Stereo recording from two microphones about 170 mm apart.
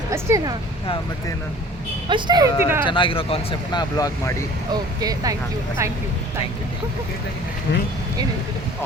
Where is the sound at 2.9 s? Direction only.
30° left (ahead or behind).